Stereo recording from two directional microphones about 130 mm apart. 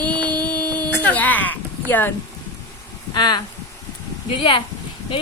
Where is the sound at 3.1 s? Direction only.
35° left (ahead or behind).